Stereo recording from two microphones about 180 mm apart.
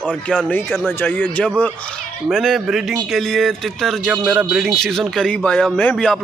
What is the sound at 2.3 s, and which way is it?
A man's voice, centre (ahead or behind).